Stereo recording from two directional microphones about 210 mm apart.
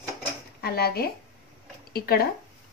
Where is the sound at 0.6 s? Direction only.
45° left (ahead or behind).